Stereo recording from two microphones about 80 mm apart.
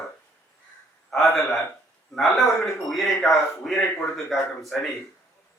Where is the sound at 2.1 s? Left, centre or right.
Centre.